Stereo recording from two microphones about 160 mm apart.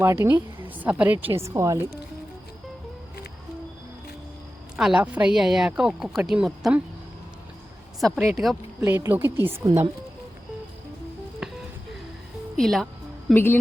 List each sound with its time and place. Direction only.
0.0 s a woman's voice: 15° right (ahead or behind)
4.8 s a woman's voice: 5° right (ahead or behind)
8.3 s a woman's voice: centre (ahead or behind)
8.8 s a woman's voice: 15° right (ahead or behind)
11.4 s a sound: 5° right (ahead or behind)
12.5 s music: centre (ahead or behind)
13.3 s a woman's voice: 15° left (ahead or behind)